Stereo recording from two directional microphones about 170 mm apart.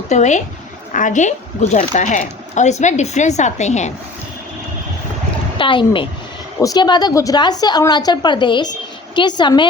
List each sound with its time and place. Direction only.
0.1 s speech: 45° left (ahead or behind)
5.5 s a woman's voice: 30° left (ahead or behind)